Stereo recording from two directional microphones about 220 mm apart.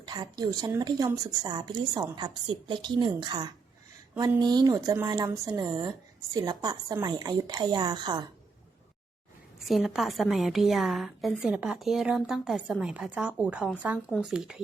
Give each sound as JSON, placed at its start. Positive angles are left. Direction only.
{"t": 0.0, "sound": "a woman's voice", "side_deg": -20}
{"t": 9.6, "sound": "a woman's voice", "side_deg": 0}